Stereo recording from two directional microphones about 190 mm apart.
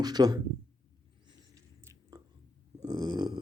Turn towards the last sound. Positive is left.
turn(degrees=-20)  # may be behind; listen again after turning